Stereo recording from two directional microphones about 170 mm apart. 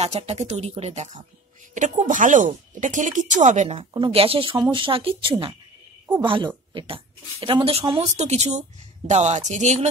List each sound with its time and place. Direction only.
0.0 s speech: 40° right (ahead or behind)
3.7 s speech: 30° right (ahead or behind)
8.2 s speech: 40° right (ahead or behind)